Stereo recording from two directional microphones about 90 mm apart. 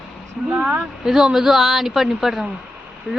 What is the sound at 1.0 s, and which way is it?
Speech, 5° right (ahead or behind).